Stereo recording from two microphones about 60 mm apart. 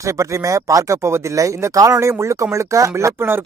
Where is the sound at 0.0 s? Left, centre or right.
Right.